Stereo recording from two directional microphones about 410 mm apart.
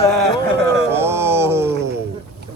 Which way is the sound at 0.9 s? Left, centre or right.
Centre.